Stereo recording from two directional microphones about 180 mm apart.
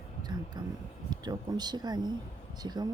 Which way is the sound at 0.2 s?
25° right (ahead or behind).